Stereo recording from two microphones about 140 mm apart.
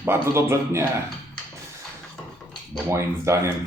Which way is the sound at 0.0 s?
15° right (ahead or behind).